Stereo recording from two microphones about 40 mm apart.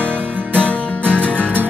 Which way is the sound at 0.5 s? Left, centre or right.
Right.